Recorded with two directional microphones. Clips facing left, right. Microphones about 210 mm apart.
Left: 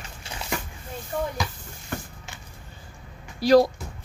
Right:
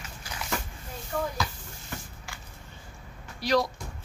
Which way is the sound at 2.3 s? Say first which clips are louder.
Right 1 dB; 20° left (ahead or behind).